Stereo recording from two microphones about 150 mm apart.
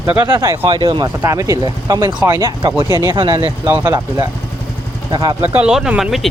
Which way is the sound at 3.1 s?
30° right (ahead or behind).